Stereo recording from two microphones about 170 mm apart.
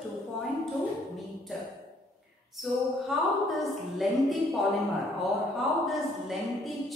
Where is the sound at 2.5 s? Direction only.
Centre (ahead or behind).